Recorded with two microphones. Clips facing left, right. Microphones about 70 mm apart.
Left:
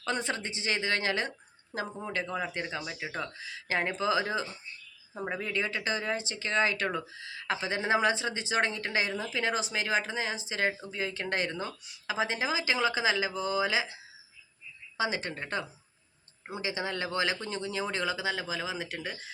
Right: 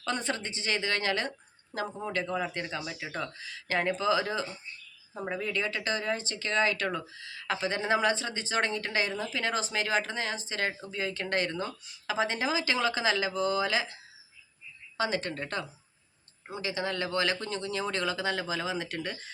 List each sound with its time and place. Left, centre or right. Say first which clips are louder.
0.0 s speech: even; left
3.3 s speech: right 1 dB; left
5.1 s speech: even; centre
5.4 s speech: right 1 dB; left